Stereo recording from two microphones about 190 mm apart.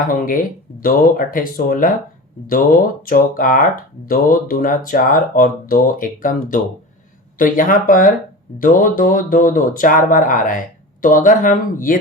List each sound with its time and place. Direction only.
0.1 s speech: 45° left (ahead or behind)
3.1 s speech: 45° left (ahead or behind)